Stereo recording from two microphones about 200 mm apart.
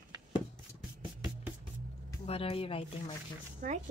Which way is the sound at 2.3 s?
30° left (ahead or behind).